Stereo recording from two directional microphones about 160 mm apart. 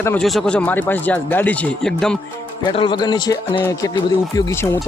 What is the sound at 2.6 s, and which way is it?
Speech, 30° left (ahead or behind).